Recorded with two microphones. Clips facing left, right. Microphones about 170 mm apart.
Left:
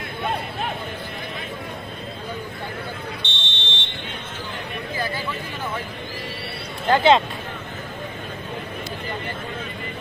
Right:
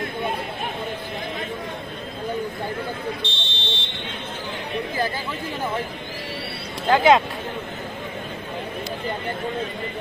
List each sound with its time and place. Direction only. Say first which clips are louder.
3.2 s fire alarm: right 2 dB; 35° right (ahead or behind)
6.9 s speech: even; 5° right (ahead or behind)